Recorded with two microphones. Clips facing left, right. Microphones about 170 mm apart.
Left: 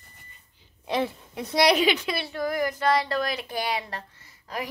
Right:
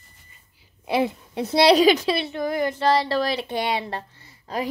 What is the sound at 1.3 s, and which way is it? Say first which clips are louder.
Child singing: right 5 dB; 30° right (ahead or behind).